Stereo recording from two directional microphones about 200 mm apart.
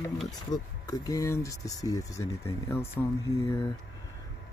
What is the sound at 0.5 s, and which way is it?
Speech, 20° left (ahead or behind).